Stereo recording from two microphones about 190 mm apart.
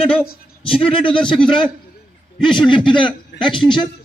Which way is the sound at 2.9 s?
25° left (ahead or behind).